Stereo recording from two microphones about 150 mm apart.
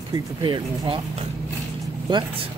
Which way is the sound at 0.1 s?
30° right (ahead or behind).